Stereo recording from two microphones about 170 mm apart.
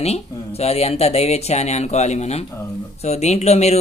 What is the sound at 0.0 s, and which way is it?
A man's voice, 40° left (ahead or behind).